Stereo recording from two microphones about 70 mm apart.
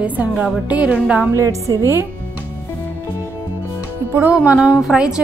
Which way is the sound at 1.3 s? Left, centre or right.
Right.